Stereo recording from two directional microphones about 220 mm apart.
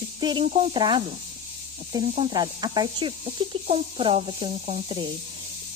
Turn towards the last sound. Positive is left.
turn(degrees=-25)  # may be behind; listen again after turning